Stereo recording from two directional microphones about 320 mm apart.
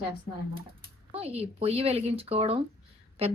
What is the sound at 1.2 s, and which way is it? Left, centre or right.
A woman's voice, centre.